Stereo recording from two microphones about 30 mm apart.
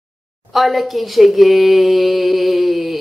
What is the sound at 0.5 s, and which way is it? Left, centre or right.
Speech, centre.